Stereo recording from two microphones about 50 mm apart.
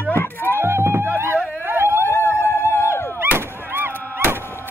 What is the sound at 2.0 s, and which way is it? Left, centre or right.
Howl, left.